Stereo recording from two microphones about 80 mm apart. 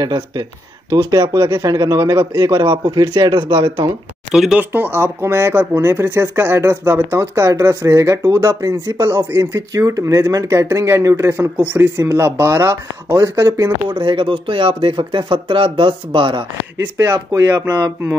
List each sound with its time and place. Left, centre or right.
0.0 s speech: right
1.2 s speech: right
1.6 s speech: right
2.6 s speech: right
4.3 s speech: centre
4.7 s speech: right
13.8 s speech: right
17.0 s speech: right